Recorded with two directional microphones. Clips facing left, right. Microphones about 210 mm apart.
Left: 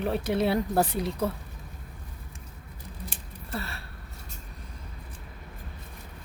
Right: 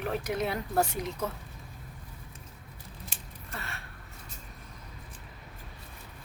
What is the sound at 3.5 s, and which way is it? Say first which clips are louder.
Gasp: left 7 dB; 35° left (ahead or behind).